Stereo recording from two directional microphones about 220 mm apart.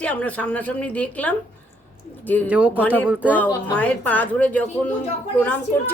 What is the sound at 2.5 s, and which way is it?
Speech, 5° right (ahead or behind).